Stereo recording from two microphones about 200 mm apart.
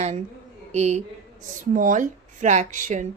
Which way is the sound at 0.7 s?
35° right (ahead or behind).